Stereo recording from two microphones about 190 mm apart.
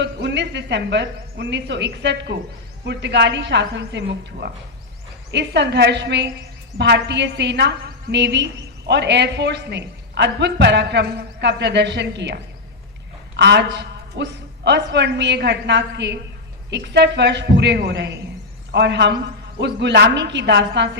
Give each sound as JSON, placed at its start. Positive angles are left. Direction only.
{"t": 0.0, "sound": "a woman's voice", "side_deg": -65}